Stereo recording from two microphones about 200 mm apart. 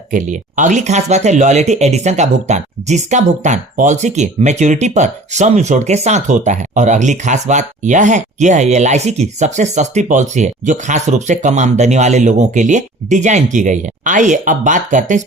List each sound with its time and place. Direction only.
0.1 s speech: 40° right (ahead or behind)